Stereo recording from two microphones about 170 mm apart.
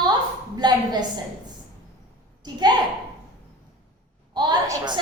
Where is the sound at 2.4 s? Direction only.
25° right (ahead or behind).